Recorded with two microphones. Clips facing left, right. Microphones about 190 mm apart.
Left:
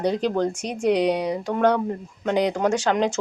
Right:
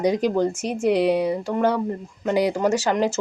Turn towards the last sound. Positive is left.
turn(degrees=-5)  # may be behind; listen again after turning